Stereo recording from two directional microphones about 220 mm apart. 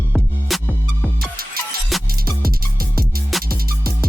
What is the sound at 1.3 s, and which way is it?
Music, 45° right (ahead or behind).